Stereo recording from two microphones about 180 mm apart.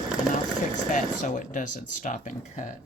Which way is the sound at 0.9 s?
45° left (ahead or behind).